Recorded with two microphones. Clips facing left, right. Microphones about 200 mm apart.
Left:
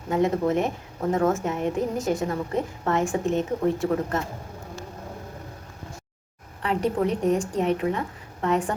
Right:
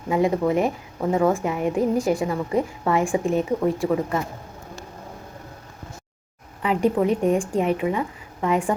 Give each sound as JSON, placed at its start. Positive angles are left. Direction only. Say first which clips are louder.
{"t": 0.1, "sound": "a woman's voice", "louder": "right 2 dB", "side_deg": -10}
{"t": 6.6, "sound": "a woman's voice", "louder": "right 4 dB", "side_deg": -5}